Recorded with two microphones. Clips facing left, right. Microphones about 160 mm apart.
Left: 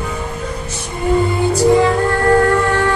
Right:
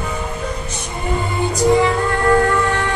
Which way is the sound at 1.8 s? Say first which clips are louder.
Left 2 dB; 55° left (ahead or behind).